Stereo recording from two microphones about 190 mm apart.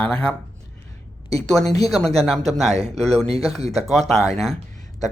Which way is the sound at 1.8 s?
Centre (ahead or behind).